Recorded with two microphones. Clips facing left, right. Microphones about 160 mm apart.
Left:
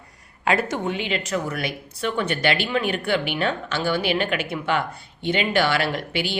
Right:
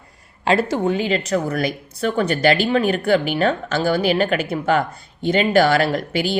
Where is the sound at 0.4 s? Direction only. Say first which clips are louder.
Right 5 dB; 30° right (ahead or behind).